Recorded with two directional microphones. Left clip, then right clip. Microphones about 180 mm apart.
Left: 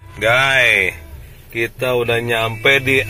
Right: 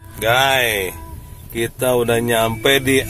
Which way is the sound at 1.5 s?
20° right (ahead or behind).